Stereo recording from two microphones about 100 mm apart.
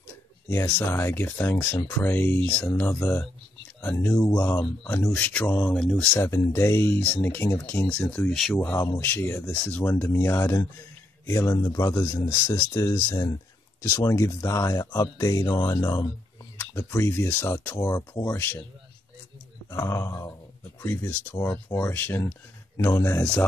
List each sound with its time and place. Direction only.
0.5 s speech: 25° left (ahead or behind)
5.1 s speech: 15° left (ahead or behind)
5.8 s speech: 5° left (ahead or behind)
6.1 s speech: 30° left (ahead or behind)
8.3 s speech: centre (ahead or behind)
8.5 s speech: 25° left (ahead or behind)
9.5 s speech: 15° left (ahead or behind)
9.8 s speech: 30° left (ahead or behind)
16.5 s speech: 25° left (ahead or behind)
19.7 s speech: 30° left (ahead or behind)